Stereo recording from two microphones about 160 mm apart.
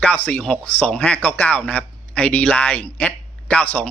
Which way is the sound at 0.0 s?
10° left (ahead or behind).